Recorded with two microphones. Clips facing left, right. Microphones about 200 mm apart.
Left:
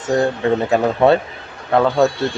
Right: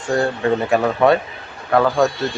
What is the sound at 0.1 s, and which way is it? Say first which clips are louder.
Speech: left 2 dB; 20° left (ahead or behind).